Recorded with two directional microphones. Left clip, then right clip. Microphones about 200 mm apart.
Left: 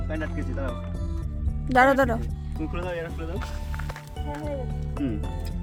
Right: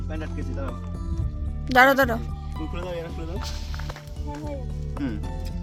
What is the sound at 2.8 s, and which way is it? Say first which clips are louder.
Speech: left 1 dB; 15° right (ahead or behind).